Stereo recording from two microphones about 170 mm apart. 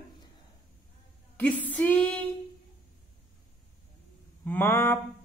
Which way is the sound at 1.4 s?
10° left (ahead or behind).